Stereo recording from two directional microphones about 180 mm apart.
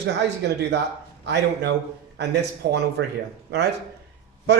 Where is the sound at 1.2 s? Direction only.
70° right (ahead or behind).